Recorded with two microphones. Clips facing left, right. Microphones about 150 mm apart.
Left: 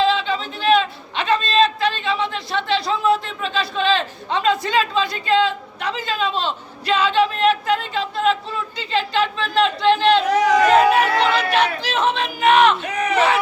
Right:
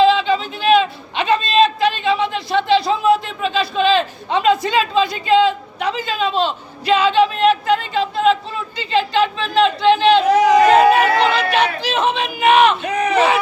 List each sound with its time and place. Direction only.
0.1 s a sound: 10° right (ahead or behind)
10.2 s chatter: 25° right (ahead or behind)
10.8 s chatter: 5° right (ahead or behind)
11.5 s crowd: 5° right (ahead or behind)
12.8 s crowd: 35° right (ahead or behind)